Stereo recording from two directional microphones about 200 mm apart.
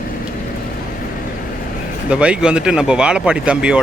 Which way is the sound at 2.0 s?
5° right (ahead or behind).